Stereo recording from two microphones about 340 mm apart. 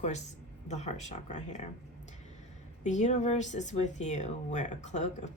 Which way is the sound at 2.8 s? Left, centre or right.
Left.